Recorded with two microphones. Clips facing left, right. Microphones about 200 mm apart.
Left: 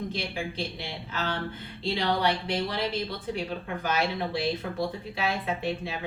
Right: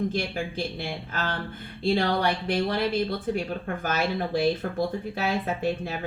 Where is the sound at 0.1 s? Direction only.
45° right (ahead or behind).